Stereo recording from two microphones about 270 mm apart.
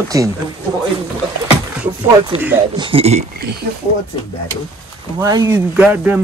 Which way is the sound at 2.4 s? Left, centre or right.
Centre.